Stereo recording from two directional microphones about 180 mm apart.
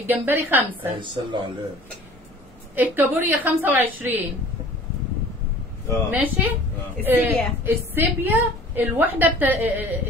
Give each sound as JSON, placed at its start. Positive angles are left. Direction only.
{"t": 0.0, "sound": "a woman's voice", "side_deg": -10}
{"t": 0.9, "sound": "speech", "side_deg": -25}
{"t": 2.7, "sound": "a woman's voice", "side_deg": -10}
{"t": 6.0, "sound": "a woman's voice", "side_deg": -10}